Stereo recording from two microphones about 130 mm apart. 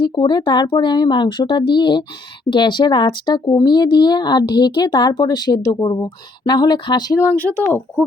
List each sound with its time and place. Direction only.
0.0 s speech: 35° left (ahead or behind)
7.2 s speech: 15° left (ahead or behind)